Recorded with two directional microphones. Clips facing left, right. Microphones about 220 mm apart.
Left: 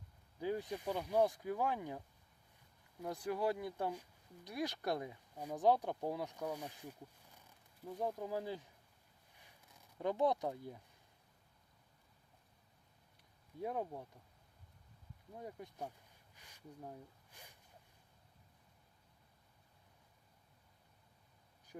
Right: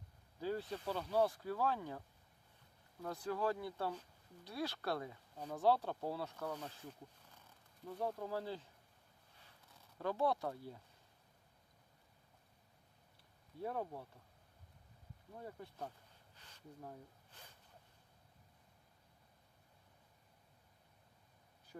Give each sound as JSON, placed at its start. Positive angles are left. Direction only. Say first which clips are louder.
{"t": 0.3, "sound": "speech", "louder": "left 1 dB", "side_deg": 15}
{"t": 10.0, "sound": "speech", "louder": "left 2 dB", "side_deg": 20}
{"t": 13.6, "sound": "speech", "louder": "left 1 dB", "side_deg": 15}
{"t": 15.4, "sound": "speech", "louder": "left 1 dB", "side_deg": 15}
{"t": 16.3, "sound": "a sound", "louder": "left 2 dB", "side_deg": 10}